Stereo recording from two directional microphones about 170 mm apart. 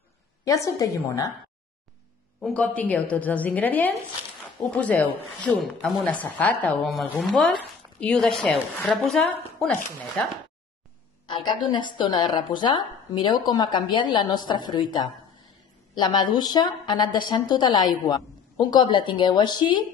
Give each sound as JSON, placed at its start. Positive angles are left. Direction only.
{"t": 0.5, "sound": "a woman's voice", "side_deg": 20}
{"t": 2.4, "sound": "a woman's voice", "side_deg": 5}
{"t": 11.2, "sound": "a woman's voice", "side_deg": 25}